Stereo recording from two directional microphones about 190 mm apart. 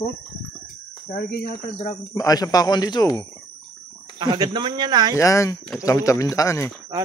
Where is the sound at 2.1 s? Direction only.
20° left (ahead or behind).